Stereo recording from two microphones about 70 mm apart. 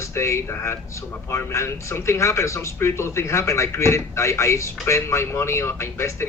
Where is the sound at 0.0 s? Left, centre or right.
Left.